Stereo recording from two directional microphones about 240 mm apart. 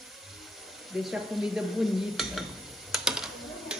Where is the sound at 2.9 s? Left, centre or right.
Centre.